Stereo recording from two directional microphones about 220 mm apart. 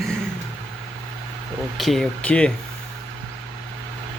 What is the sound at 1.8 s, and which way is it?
Speech, centre (ahead or behind).